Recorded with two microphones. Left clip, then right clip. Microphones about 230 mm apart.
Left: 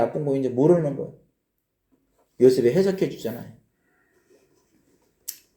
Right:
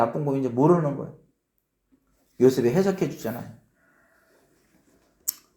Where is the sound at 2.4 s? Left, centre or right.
Right.